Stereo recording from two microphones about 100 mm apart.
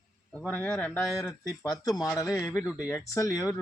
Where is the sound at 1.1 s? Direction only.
35° left (ahead or behind).